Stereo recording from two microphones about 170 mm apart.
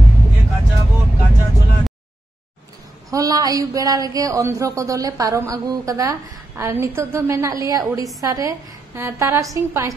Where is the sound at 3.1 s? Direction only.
20° right (ahead or behind).